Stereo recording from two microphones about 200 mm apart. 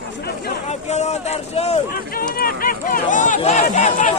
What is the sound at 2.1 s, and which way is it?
Run, 45° left (ahead or behind).